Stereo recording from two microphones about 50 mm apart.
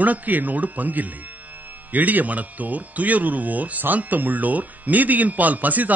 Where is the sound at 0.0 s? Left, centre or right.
Right.